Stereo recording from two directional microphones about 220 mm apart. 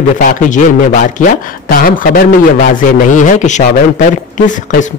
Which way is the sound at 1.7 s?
40° left (ahead or behind).